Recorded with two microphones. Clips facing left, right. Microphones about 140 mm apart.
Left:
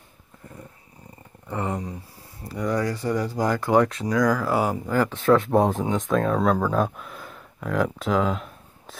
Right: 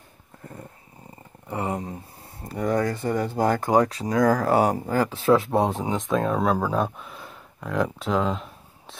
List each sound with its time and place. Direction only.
1.7 s speech: 25° right (ahead or behind)
2.4 s speech: 50° right (ahead or behind)
3.7 s speech: 35° right (ahead or behind)
5.3 s speech: centre (ahead or behind)